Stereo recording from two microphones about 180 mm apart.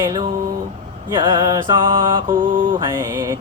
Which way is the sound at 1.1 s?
25° right (ahead or behind).